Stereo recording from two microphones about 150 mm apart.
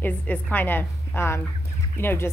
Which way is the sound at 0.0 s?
10° left (ahead or behind).